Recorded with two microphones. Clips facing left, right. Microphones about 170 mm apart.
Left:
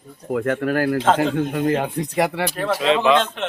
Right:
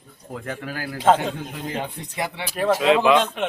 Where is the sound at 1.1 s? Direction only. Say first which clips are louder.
Left 6 dB; 70° left (ahead or behind).